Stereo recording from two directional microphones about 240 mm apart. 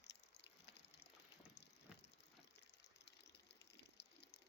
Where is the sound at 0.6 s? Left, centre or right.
Left.